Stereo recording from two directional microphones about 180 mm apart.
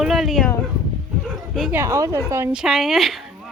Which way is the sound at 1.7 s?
15° right (ahead or behind).